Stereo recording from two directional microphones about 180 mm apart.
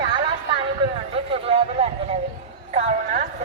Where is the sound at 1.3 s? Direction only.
35° right (ahead or behind).